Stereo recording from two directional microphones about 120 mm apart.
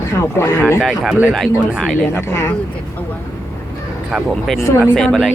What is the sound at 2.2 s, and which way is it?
Speech, 25° left (ahead or behind).